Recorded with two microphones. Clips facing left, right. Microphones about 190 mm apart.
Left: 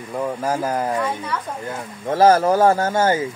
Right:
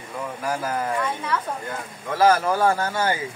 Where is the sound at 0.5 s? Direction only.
25° left (ahead or behind).